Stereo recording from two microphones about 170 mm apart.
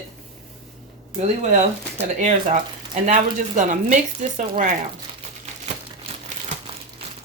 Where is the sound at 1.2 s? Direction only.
40° right (ahead or behind).